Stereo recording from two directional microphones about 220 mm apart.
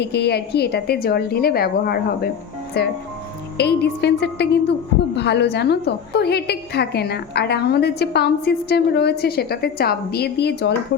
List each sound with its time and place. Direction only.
0.0 s a woman's voice: 50° left (ahead or behind)